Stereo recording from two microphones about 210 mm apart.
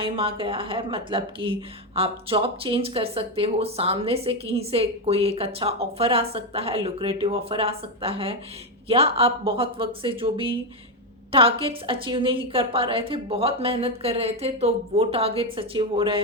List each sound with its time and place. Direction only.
0.0 s speech: 25° right (ahead or behind)